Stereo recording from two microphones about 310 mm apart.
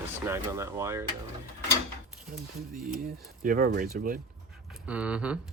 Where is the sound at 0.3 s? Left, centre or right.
Centre.